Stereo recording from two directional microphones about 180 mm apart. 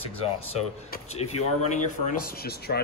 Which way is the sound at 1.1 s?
35° left (ahead or behind).